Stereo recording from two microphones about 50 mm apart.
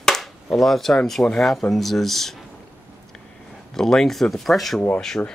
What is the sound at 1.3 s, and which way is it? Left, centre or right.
Speech, centre.